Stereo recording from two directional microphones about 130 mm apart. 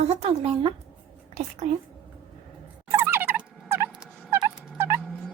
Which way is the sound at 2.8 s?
20° right (ahead or behind).